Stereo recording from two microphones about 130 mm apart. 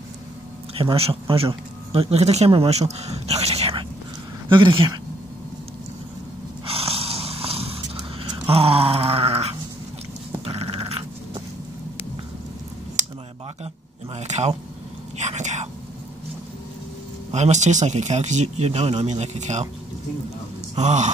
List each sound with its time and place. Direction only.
0.7 s speech: 45° right (ahead or behind)
4.5 s speech: 40° right (ahead or behind)
6.6 s snoring: 45° right (ahead or behind)
10.4 s dog: 50° right (ahead or behind)
14.1 s a sound: 60° right (ahead or behind)
15.1 s whispering: 65° right (ahead or behind)
17.3 s speech: 65° right (ahead or behind)
20.7 s speech: 65° right (ahead or behind)